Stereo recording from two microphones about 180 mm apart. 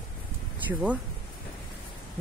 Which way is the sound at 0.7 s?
10° right (ahead or behind).